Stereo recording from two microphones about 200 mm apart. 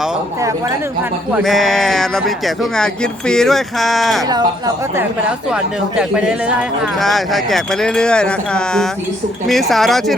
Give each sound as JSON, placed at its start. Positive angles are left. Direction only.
{"t": 1.3, "sound": "speech", "side_deg": 0}
{"t": 4.3, "sound": "speech", "side_deg": -20}
{"t": 6.0, "sound": "speech", "side_deg": -5}